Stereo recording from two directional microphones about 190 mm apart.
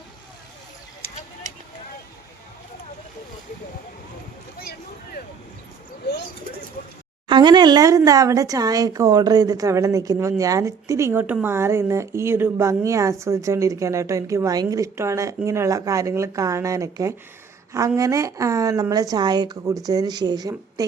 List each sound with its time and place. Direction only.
7.3 s speech: 25° right (ahead or behind)